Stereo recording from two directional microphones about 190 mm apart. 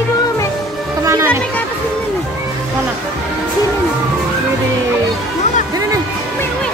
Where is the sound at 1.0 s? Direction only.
15° right (ahead or behind).